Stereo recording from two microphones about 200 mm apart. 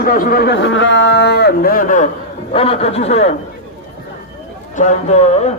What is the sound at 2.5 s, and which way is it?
Speech, 30° left (ahead or behind).